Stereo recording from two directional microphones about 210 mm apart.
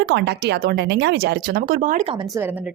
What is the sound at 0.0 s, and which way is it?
Speech, 55° right (ahead or behind).